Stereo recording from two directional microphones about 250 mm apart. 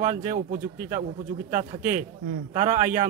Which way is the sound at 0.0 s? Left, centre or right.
Right.